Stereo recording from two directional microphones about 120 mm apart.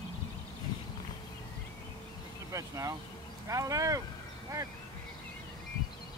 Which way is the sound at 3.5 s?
30° right (ahead or behind).